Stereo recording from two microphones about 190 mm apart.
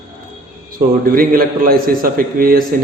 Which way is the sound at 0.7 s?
50° right (ahead or behind).